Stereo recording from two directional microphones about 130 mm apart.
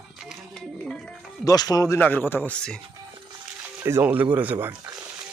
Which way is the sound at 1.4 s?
30° left (ahead or behind).